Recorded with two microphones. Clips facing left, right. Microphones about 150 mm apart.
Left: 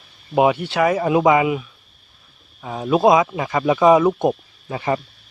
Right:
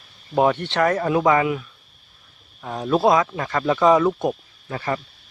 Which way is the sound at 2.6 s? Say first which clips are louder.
Left 2 dB; 5° left (ahead or behind).